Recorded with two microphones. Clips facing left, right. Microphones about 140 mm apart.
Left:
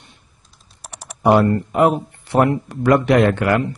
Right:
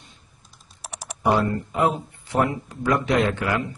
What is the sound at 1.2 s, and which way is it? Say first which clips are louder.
Speech: left 7 dB; 65° left (ahead or behind).